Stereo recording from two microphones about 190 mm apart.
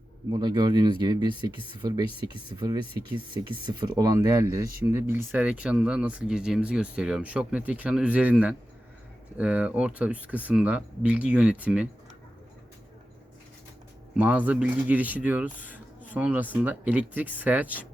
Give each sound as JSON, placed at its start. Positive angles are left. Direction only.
{"t": 0.3, "sound": "speech", "side_deg": -20}
{"t": 14.2, "sound": "speech", "side_deg": -10}